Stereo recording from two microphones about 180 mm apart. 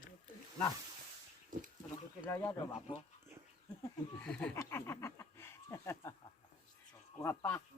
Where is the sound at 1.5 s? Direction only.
50° right (ahead or behind).